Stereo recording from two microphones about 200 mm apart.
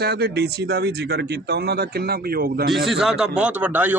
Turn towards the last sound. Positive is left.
turn(degrees=-10)  # may be behind; listen again after turning